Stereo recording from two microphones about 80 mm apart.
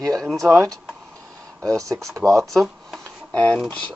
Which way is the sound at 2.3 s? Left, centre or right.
Centre.